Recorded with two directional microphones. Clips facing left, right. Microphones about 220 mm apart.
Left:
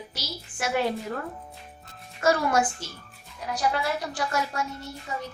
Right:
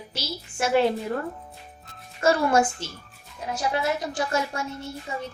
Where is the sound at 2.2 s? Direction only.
25° right (ahead or behind).